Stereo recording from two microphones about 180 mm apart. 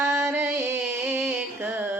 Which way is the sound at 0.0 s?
15° right (ahead or behind).